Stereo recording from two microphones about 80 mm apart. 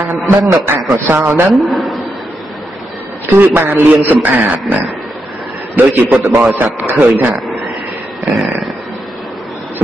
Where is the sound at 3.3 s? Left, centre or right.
Right.